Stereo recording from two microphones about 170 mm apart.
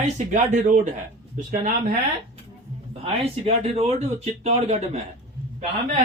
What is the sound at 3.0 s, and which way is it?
Speech, 35° right (ahead or behind).